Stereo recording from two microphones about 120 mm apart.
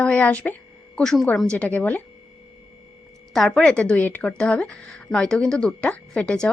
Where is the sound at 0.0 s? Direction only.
10° left (ahead or behind).